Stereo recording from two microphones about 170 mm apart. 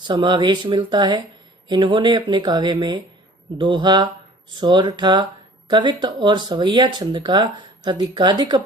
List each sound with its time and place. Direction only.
0.0 s speech: 25° right (ahead or behind)